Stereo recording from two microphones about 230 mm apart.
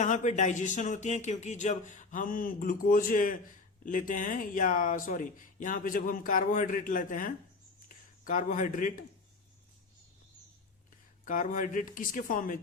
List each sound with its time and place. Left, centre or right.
0.0 s speech: left
11.3 s speech: left